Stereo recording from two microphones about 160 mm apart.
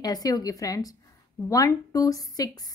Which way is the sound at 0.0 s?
25° left (ahead or behind).